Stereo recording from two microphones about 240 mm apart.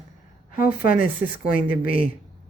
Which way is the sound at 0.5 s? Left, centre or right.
Left.